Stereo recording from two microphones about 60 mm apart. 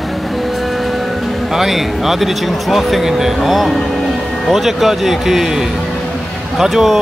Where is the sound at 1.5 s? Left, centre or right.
Centre.